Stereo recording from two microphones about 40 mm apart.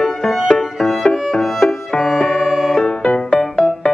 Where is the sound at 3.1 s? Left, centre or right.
Left.